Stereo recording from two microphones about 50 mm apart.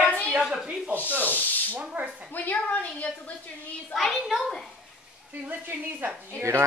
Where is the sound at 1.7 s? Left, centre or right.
Right.